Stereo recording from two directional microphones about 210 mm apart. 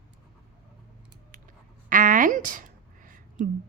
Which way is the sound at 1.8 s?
40° right (ahead or behind).